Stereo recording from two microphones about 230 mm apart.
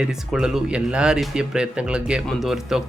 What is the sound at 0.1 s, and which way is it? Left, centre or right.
Speech, centre.